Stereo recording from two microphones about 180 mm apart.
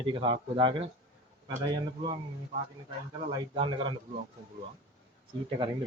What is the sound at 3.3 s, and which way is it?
Speech, 30° right (ahead or behind).